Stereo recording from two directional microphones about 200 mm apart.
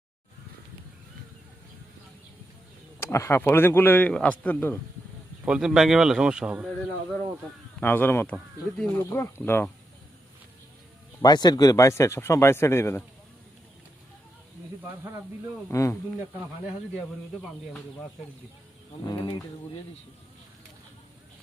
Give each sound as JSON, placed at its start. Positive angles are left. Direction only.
{"t": 3.0, "sound": "speech", "side_deg": 15}
{"t": 5.5, "sound": "speech", "side_deg": -5}
{"t": 7.8, "sound": "speech", "side_deg": 10}
{"t": 11.2, "sound": "speech", "side_deg": 20}
{"t": 14.8, "sound": "speech", "side_deg": -15}
{"t": 15.7, "sound": "speech", "side_deg": 15}
{"t": 19.0, "sound": "insect", "side_deg": 20}